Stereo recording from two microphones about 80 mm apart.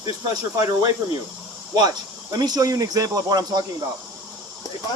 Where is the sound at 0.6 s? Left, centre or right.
Right.